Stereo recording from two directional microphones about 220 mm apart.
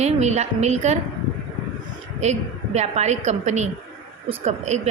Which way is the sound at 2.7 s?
30° right (ahead or behind).